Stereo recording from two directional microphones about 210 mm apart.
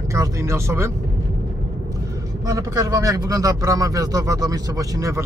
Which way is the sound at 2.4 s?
15° right (ahead or behind).